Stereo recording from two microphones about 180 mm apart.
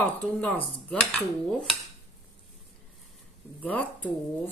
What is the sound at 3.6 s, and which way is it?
Speech, 10° left (ahead or behind).